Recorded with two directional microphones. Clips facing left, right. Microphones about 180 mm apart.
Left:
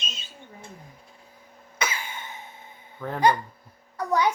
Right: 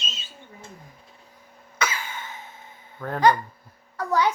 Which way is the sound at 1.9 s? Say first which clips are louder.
Right 2 dB; 15° left (ahead or behind).